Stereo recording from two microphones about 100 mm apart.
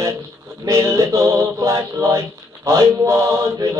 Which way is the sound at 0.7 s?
30° right (ahead or behind).